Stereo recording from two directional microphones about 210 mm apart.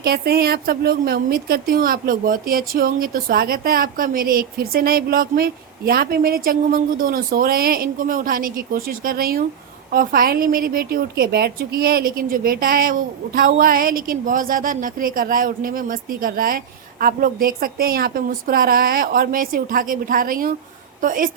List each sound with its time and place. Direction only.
0.0 s a woman's voice: 45° right (ahead or behind)